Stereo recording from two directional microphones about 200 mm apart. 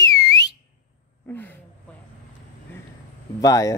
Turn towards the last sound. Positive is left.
turn(degrees=15)  # may be behind; listen again after turning